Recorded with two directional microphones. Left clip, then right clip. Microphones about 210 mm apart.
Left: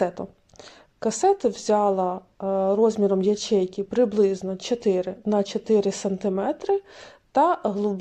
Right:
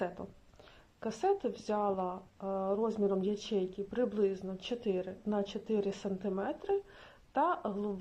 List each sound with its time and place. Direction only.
0.9 s speech: 20° left (ahead or behind)